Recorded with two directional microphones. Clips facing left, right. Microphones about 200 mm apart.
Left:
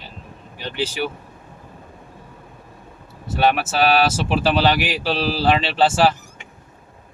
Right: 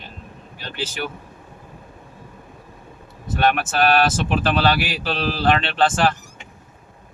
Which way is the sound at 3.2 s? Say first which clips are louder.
Left 1 dB; 10° left (ahead or behind).